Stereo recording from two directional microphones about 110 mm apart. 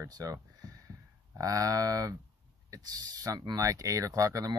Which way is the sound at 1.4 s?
30° right (ahead or behind).